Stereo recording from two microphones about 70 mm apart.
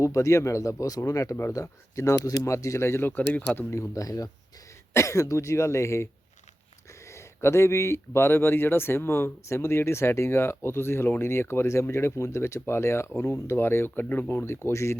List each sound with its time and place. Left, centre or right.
0.0 s speech: left
3.1 s speech: left
3.7 s speech: left